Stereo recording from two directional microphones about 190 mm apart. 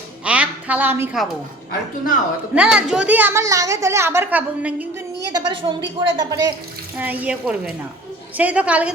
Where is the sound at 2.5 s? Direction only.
5° right (ahead or behind).